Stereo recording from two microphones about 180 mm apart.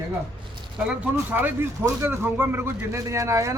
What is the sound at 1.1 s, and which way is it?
Speech, 10° right (ahead or behind).